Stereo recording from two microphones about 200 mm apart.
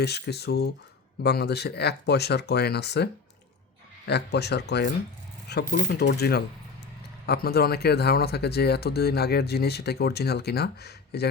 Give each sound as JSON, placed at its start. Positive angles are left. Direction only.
{"t": 0.0, "sound": "speech", "side_deg": 55}